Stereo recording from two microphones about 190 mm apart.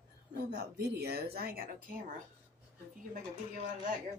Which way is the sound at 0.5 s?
60° right (ahead or behind).